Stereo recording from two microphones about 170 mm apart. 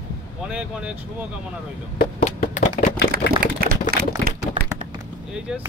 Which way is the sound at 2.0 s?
55° left (ahead or behind).